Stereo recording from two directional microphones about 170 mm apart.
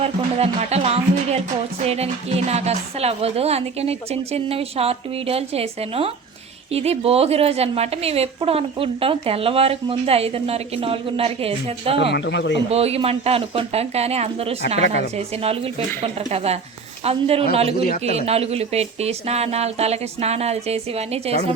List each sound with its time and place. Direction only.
0.0 s a woman's voice: 35° right (ahead or behind)
12.1 s speech: 90° left
12.7 s a woman's voice: 35° right (ahead or behind)
16.3 s a woman's voice: 40° right (ahead or behind)